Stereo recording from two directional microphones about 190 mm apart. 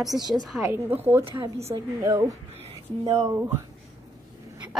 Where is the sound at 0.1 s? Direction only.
20° right (ahead or behind).